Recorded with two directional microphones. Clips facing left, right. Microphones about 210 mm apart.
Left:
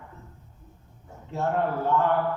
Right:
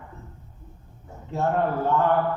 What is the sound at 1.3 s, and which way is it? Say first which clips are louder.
Speech: right 2 dB; 50° right (ahead or behind).